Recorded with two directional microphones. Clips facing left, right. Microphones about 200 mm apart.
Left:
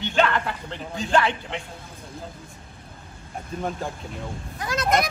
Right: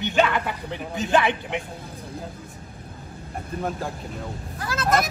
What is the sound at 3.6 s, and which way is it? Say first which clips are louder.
Speech: right 1 dB; 5° right (ahead or behind).